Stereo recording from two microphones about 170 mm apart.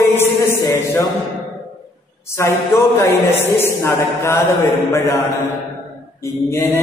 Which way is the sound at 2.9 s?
15° left (ahead or behind).